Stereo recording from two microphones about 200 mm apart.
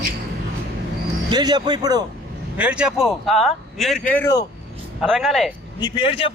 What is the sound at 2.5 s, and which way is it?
Speech, 5° right (ahead or behind).